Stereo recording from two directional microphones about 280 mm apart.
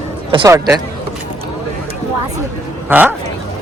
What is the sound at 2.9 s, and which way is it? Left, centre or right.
Speech, centre.